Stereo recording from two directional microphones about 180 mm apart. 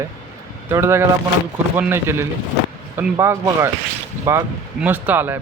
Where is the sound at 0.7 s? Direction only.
15° right (ahead or behind).